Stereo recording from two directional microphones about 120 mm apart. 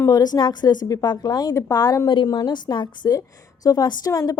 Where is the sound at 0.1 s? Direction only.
35° left (ahead or behind).